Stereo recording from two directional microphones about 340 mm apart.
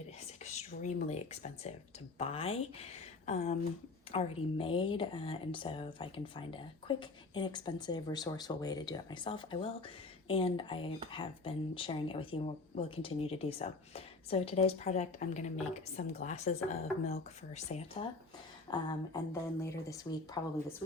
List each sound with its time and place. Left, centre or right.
0.8 s speech: centre